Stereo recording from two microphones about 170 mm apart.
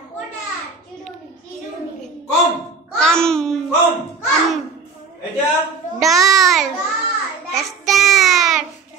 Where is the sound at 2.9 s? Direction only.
5° left (ahead or behind).